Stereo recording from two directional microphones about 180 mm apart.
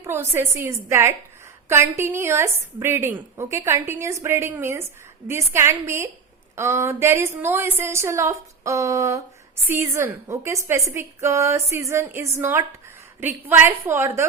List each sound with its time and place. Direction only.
0.0 s a woman's voice: 15° right (ahead or behind)